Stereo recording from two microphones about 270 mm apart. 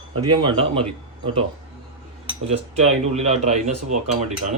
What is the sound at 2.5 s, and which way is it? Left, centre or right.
Speech, right.